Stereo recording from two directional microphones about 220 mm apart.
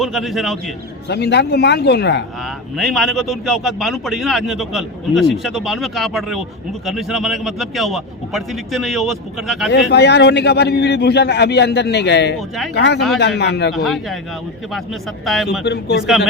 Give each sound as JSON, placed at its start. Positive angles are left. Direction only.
{"t": 0.0, "sound": "a man's voice", "side_deg": 0}
{"t": 1.0, "sound": "a man's voice", "side_deg": 50}
{"t": 2.7, "sound": "a man's voice", "side_deg": 0}
{"t": 9.9, "sound": "a man's voice", "side_deg": 50}
{"t": 13.7, "sound": "a man's voice", "side_deg": 0}
{"t": 15.2, "sound": "a man's voice", "side_deg": 0}
{"t": 15.6, "sound": "a man's voice", "side_deg": 50}